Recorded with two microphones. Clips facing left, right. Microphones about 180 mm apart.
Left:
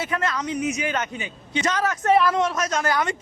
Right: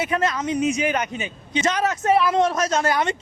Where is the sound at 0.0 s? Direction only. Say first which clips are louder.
Right 3 dB; 20° right (ahead or behind).